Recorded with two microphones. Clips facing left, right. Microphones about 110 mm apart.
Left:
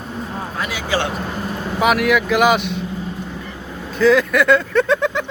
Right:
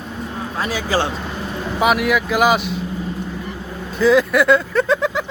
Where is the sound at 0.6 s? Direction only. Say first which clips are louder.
Right 2 dB; 35° right (ahead or behind).